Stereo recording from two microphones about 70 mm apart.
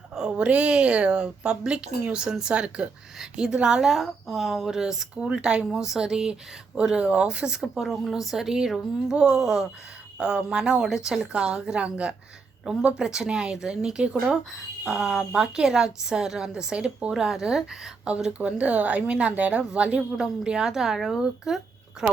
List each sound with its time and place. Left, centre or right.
0.1 s speech: centre